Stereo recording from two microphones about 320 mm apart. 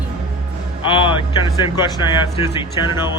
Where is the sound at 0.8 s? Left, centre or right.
Centre.